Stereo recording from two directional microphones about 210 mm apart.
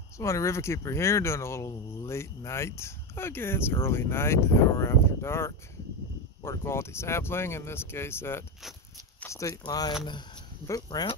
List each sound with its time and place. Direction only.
0.2 s speech: 15° left (ahead or behind)